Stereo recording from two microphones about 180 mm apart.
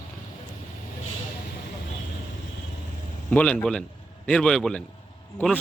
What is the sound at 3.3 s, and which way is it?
A man's voice, 10° left (ahead or behind).